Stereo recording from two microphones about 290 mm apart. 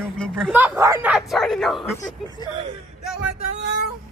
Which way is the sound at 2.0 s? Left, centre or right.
Centre.